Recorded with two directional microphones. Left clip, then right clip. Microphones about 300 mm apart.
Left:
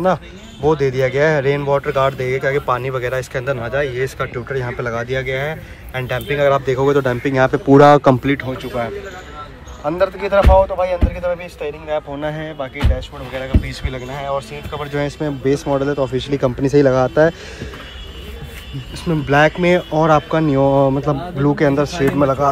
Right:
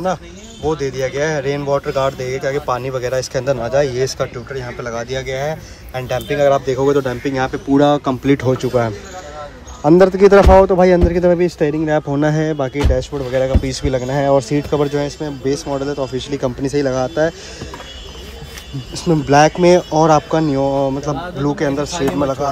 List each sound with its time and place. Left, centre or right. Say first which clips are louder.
0.7 s speech: left 3 dB; centre
4.5 s speech: left 3 dB; centre
9.8 s a man's voice: right 8 dB; right
14.9 s speech: right 1 dB; centre
19.0 s speech: right 2 dB; centre